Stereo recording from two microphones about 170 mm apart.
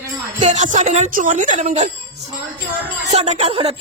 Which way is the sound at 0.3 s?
45° right (ahead or behind).